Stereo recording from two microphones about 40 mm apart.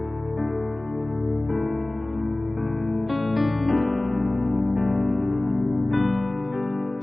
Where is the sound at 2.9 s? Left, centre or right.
Centre.